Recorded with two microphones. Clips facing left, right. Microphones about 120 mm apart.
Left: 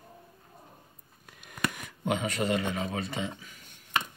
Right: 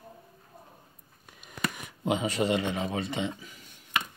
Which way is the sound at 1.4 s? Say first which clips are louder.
Left 1 dB; centre (ahead or behind).